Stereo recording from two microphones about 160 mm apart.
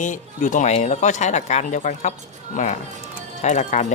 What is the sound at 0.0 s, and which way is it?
Speech, 55° left (ahead or behind).